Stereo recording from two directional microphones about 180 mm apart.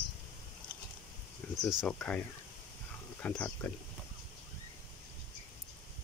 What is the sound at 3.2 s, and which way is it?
Speech, 10° left (ahead or behind).